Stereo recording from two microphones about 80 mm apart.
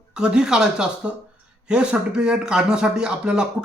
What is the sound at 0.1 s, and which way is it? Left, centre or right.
Speech, centre.